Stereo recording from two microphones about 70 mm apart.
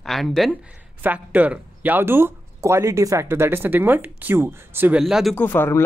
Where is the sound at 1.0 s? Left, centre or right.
Right.